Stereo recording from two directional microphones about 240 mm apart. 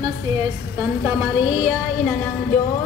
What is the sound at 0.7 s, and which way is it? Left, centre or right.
A woman's voice, centre.